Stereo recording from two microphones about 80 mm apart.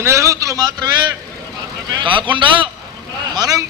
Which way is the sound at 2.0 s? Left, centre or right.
Right.